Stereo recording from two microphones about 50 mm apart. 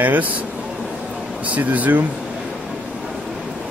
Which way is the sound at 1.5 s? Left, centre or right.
Right.